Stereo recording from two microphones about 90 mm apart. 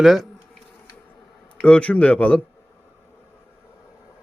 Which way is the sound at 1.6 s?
15° left (ahead or behind).